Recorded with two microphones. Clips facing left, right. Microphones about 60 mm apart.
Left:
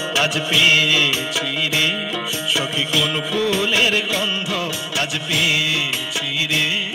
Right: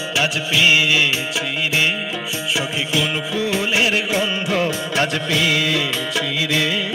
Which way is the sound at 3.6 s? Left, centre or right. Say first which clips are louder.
Even; right.